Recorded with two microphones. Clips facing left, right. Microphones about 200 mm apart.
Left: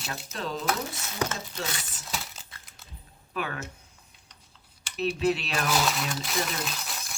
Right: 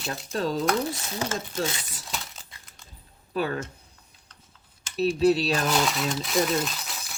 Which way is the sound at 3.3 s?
35° right (ahead or behind).